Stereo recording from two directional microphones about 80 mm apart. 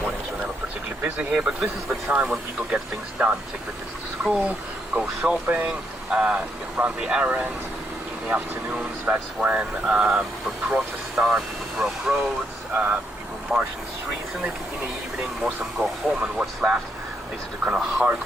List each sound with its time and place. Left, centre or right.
1.0 s speech: centre
1.4 s speech: centre
2.0 s speech: centre
2.3 s speech: centre
12.7 s speech: right
13.5 s speech: centre
15.8 s speech: centre